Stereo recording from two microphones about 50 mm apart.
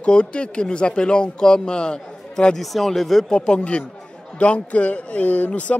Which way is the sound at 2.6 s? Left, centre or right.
Centre.